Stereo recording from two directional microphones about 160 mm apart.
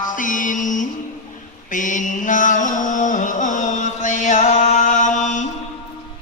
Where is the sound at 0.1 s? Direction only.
55° left (ahead or behind).